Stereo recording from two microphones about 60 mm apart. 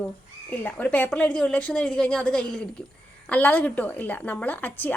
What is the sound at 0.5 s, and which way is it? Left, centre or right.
A woman's voice, left.